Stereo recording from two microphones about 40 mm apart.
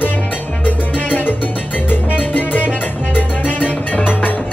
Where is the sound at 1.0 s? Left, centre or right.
Left.